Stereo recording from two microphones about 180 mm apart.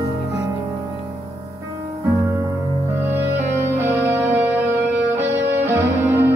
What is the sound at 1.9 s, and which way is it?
Music, 15° right (ahead or behind).